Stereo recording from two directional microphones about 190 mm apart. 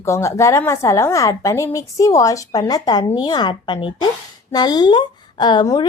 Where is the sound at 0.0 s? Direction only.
15° left (ahead or behind).